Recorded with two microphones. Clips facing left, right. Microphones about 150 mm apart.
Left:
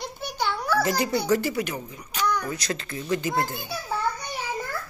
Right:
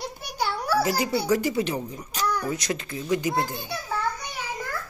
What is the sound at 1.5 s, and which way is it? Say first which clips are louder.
Speech: right 3 dB; 25° right (ahead or behind).